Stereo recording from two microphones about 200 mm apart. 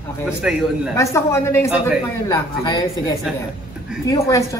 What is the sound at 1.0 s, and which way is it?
Speech, 15° left (ahead or behind).